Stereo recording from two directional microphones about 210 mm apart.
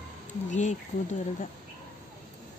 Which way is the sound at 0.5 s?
35° left (ahead or behind).